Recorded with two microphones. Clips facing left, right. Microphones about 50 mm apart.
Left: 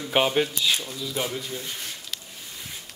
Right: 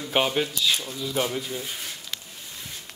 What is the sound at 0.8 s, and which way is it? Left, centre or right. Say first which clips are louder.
Speech: right 2 dB; centre.